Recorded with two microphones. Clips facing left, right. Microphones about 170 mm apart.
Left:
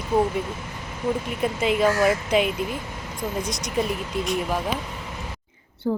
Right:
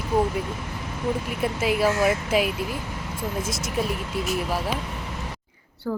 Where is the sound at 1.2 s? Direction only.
5° right (ahead or behind).